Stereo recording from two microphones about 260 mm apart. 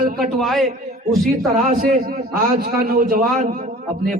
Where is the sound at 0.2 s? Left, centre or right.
Centre.